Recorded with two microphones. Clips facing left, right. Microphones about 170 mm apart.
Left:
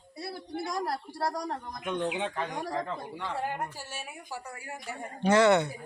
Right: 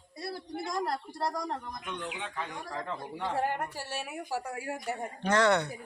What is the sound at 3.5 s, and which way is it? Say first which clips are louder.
A woman's voice: right 1 dB; 65° right (ahead or behind).